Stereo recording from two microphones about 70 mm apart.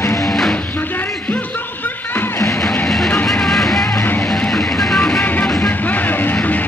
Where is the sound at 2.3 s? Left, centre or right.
Left.